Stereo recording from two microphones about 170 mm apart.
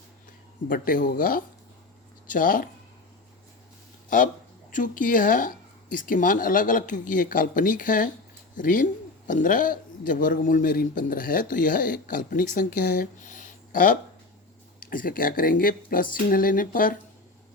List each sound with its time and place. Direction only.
0.7 s speech: 55° left (ahead or behind)
4.7 s a man's voice: 50° left (ahead or behind)